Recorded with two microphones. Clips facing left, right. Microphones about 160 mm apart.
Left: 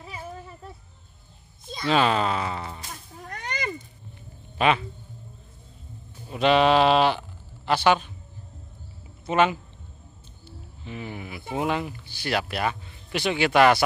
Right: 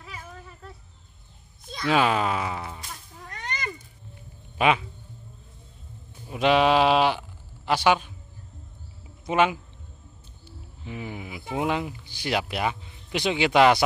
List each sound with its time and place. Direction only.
0.0 s a sound: 30° left (ahead or behind)
1.9 s speech: 10° right (ahead or behind)
4.6 s speech: 10° right (ahead or behind)
6.2 s speech: 10° right (ahead or behind)
9.2 s speech: 10° right (ahead or behind)